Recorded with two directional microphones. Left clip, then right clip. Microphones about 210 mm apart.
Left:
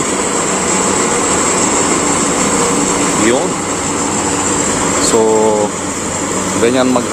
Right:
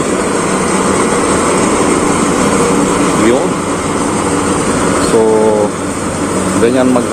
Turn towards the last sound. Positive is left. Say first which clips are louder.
# right 2 dB
turn(degrees=0)  # may be behind; listen again after turning